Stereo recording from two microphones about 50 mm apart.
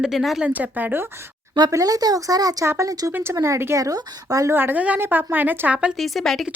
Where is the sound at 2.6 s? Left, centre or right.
Right.